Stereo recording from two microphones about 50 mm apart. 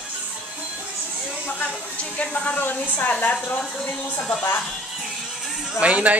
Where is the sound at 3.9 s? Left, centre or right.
Left.